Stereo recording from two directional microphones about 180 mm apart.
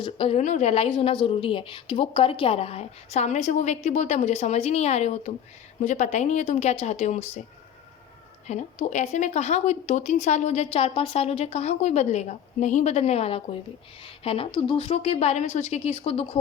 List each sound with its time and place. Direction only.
0.0 s a woman's voice: 30° left (ahead or behind)
8.4 s a woman's voice: 40° left (ahead or behind)